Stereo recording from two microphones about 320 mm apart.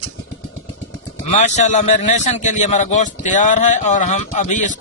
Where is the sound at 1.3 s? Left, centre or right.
Left.